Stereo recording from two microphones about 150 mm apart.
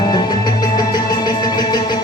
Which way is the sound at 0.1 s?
25° left (ahead or behind).